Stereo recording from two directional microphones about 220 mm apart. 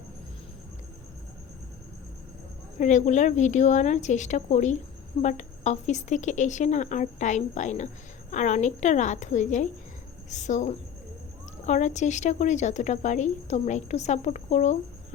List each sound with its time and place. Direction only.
2.7 s speech: 35° left (ahead or behind)